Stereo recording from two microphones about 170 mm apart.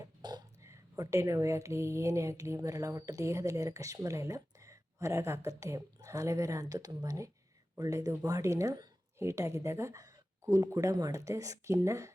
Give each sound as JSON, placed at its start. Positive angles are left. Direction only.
{"t": 0.0, "sound": "a woman's voice", "side_deg": -25}